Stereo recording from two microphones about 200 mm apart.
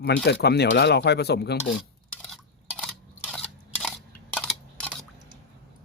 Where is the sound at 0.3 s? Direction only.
55° left (ahead or behind).